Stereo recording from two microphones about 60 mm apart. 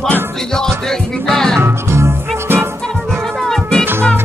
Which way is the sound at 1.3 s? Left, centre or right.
Centre.